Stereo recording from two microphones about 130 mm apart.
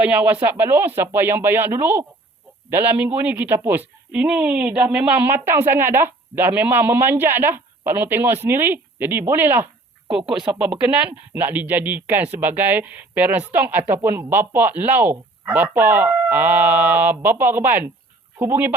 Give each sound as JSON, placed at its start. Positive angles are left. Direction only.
{"t": 0.0, "sound": "speech", "side_deg": -10}